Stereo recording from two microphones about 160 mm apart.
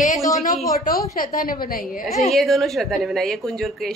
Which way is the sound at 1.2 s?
65° left (ahead or behind).